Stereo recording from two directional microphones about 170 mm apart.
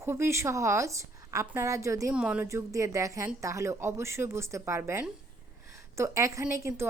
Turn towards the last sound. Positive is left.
turn(degrees=-15)  # may be behind; listen again after turning